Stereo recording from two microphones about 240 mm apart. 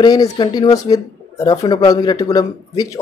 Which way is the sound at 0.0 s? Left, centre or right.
Centre.